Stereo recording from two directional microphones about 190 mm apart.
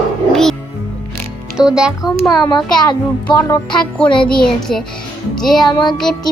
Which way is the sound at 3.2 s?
15° left (ahead or behind).